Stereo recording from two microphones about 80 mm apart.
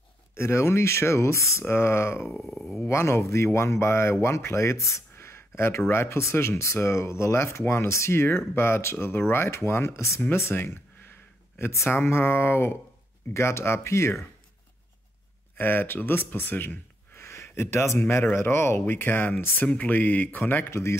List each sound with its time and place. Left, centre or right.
0.4 s speech: left
2.3 s speech: centre
2.9 s speech: left
10.3 s a sound: left
11.9 s speech: left
15.5 s speech: left
20.7 s speech: left